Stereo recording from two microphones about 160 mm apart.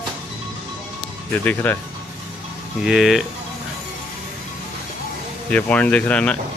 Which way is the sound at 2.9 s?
Centre (ahead or behind).